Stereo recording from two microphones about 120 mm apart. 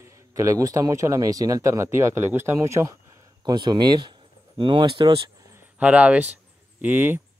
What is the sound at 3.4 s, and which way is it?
Speech, 35° right (ahead or behind).